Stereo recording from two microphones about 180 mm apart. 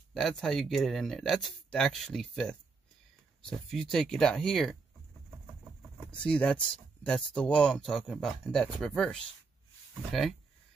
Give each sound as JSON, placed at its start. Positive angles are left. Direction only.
{"t": 0.1, "sound": "speech", "side_deg": 0}
{"t": 6.1, "sound": "speech", "side_deg": 5}